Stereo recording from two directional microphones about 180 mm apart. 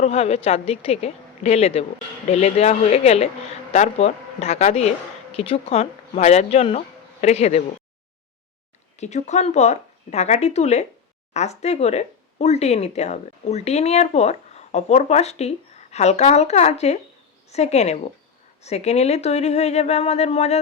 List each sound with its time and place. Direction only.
0.0 s speech: 35° left (ahead or behind)
9.0 s speech: 40° left (ahead or behind)